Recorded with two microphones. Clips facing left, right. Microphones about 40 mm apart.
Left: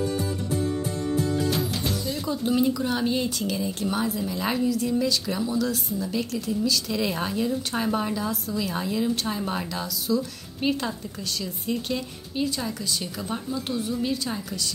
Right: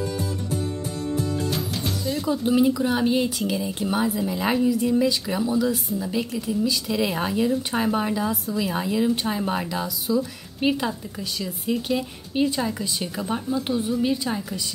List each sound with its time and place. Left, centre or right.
1.5 s music: centre
2.2 s speech: centre
12.4 s a woman's voice: right